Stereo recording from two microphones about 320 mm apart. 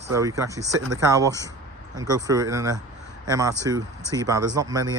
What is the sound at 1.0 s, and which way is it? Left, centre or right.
Speech, centre.